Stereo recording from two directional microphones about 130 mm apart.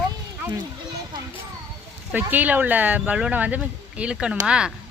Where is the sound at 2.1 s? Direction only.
15° right (ahead or behind).